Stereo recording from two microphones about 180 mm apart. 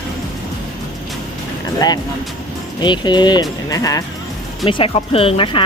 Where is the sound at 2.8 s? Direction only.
25° left (ahead or behind).